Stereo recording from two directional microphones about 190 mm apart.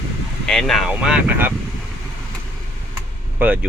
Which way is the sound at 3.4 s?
10° right (ahead or behind).